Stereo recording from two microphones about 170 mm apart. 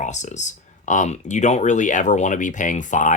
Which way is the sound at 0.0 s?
45° left (ahead or behind).